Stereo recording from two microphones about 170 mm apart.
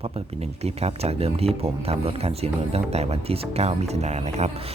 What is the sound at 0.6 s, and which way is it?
Speech, 40° right (ahead or behind).